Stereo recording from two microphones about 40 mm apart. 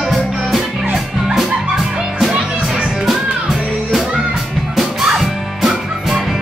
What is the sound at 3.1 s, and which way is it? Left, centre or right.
Music, centre.